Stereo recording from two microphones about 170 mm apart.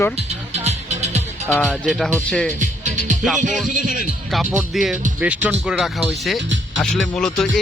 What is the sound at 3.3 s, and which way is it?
Speech, 45° right (ahead or behind).